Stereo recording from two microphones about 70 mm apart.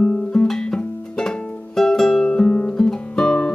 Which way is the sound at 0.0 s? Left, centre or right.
Centre.